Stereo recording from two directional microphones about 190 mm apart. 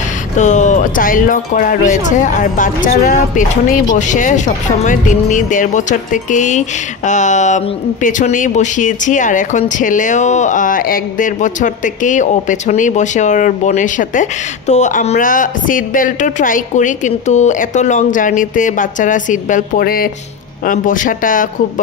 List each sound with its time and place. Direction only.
0.4 s speech: 40° left (ahead or behind)